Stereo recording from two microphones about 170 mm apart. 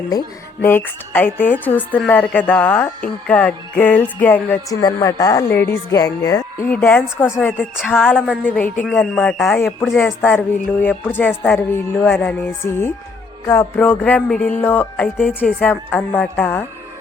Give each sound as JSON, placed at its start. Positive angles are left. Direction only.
{"t": 0.1, "sound": "music", "side_deg": 15}
{"t": 4.8, "sound": "speech", "side_deg": 20}
{"t": 6.7, "sound": "music", "side_deg": 10}